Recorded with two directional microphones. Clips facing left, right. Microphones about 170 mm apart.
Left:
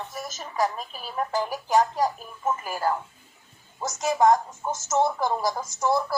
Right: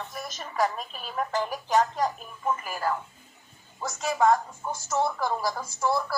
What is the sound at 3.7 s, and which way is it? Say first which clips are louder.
A woman's voice: left 3 dB; 20° left (ahead or behind).